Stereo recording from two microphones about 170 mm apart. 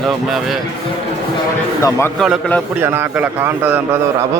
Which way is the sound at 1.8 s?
15° left (ahead or behind).